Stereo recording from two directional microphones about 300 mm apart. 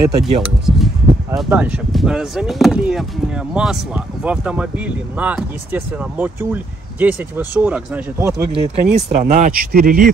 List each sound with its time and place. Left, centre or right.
0.0 s speech: centre; by 10.0 s right